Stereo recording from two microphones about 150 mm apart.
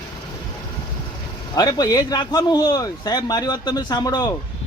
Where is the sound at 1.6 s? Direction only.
25° left (ahead or behind).